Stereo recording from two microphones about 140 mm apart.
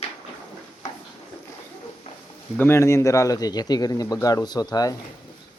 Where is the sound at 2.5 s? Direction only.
15° left (ahead or behind).